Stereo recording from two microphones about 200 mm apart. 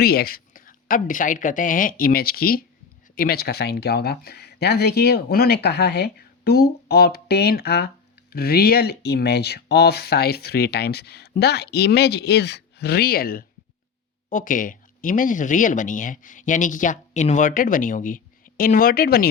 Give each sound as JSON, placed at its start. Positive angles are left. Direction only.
{"t": 0.0, "sound": "speech", "side_deg": 50}